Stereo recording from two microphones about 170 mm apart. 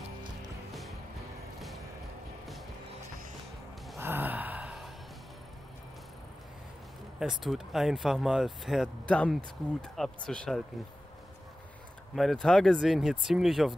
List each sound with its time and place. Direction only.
4.0 s sigh: 10° right (ahead or behind)
7.4 s speech: centre (ahead or behind)
12.2 s speech: centre (ahead or behind)